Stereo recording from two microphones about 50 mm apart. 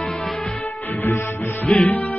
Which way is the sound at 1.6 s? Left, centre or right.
Left.